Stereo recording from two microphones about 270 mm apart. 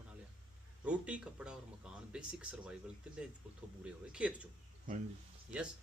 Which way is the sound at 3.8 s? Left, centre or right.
Centre.